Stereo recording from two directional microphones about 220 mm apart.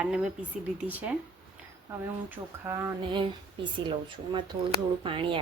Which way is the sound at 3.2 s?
20° right (ahead or behind).